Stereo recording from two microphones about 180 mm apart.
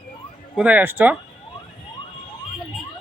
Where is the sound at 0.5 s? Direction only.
10° right (ahead or behind).